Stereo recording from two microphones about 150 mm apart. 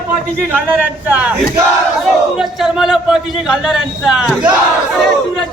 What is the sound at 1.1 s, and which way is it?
Crowd, 10° right (ahead or behind).